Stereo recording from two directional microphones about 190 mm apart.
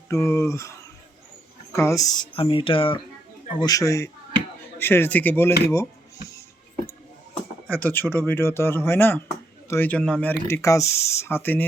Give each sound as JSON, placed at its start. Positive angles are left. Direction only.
{"t": 0.1, "sound": "speech", "side_deg": 15}
{"t": 7.7, "sound": "speech", "side_deg": 10}